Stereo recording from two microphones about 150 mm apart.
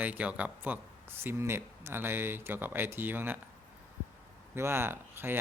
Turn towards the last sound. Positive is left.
turn(degrees=-15)  # may be behind; listen again after turning